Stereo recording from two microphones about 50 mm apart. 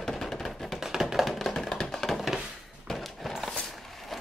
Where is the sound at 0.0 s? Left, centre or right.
Centre.